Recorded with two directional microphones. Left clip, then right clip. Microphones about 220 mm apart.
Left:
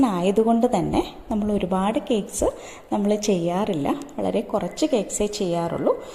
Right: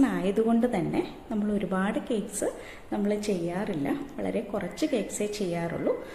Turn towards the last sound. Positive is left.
turn(degrees=25)  # may be behind; listen again after turning